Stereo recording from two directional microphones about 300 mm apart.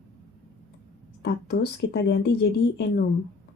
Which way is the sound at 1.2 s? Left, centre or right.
Left.